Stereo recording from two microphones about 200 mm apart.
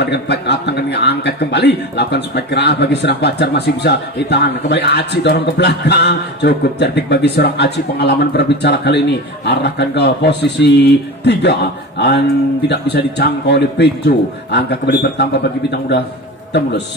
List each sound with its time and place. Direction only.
0.0 s a man's voice: 55° left (ahead or behind)
12.6 s a man's voice: 55° left (ahead or behind)